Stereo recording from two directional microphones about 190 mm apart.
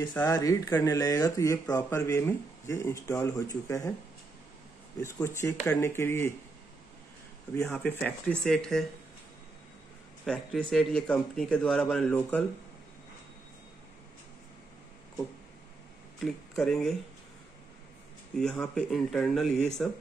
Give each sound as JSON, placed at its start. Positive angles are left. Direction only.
{"t": 0.0, "sound": "speech", "side_deg": 15}
{"t": 5.0, "sound": "speech", "side_deg": 15}
{"t": 7.5, "sound": "speech", "side_deg": 5}
{"t": 10.2, "sound": "speech", "side_deg": 5}
{"t": 16.2, "sound": "speech", "side_deg": 0}
{"t": 18.3, "sound": "speech", "side_deg": 5}